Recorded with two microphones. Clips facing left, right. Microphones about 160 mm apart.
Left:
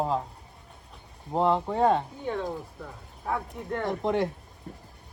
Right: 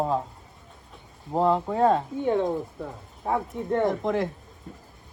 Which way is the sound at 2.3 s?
25° right (ahead or behind).